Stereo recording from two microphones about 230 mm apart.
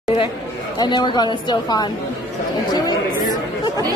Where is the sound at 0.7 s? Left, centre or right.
Centre.